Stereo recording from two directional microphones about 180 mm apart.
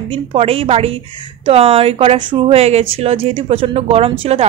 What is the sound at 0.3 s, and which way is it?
Speech, 35° right (ahead or behind).